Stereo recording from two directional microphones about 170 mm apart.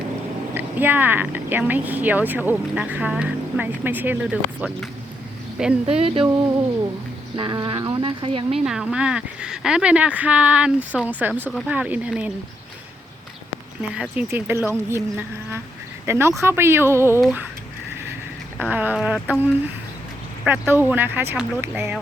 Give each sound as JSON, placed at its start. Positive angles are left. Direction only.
{"t": 0.5, "sound": "speech", "side_deg": -10}
{"t": 5.8, "sound": "speech", "side_deg": -35}
{"t": 7.3, "sound": "speech", "side_deg": -25}
{"t": 8.5, "sound": "speech", "side_deg": -5}
{"t": 13.9, "sound": "speech", "side_deg": -5}
{"t": 16.0, "sound": "speech", "side_deg": -15}
{"t": 18.6, "sound": "speech", "side_deg": -10}